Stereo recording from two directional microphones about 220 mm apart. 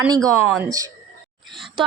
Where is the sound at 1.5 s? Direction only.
Centre (ahead or behind).